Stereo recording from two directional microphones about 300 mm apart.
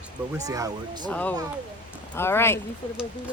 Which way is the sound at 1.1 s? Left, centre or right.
Centre.